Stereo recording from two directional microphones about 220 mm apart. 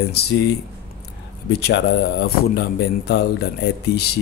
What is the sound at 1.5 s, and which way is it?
Speech, 50° left (ahead or behind).